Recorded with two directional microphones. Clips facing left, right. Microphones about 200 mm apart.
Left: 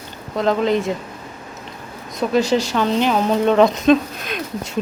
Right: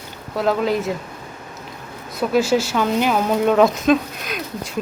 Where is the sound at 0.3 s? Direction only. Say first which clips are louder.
Left 2 dB; 5° right (ahead or behind).